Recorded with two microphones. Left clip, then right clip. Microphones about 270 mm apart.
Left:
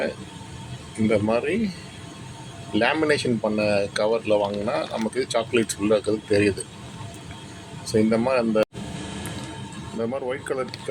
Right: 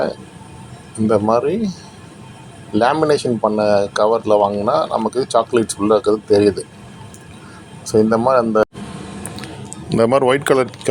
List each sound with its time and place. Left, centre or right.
1.1 s speech: centre
2.8 s speech: centre
7.9 s speech: centre
10.0 s speech: right